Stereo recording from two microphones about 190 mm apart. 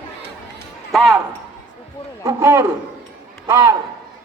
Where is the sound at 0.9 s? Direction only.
Centre (ahead or behind).